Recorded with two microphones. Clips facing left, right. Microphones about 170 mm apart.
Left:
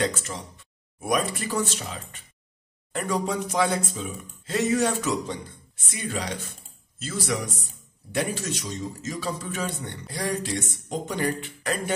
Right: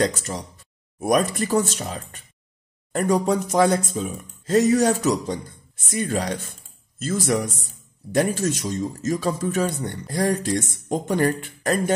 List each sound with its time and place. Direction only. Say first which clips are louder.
0.0 s a man's voice: right 4 dB; 40° right (ahead or behind)